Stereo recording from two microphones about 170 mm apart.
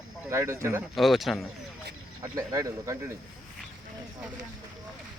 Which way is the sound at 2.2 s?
20° right (ahead or behind).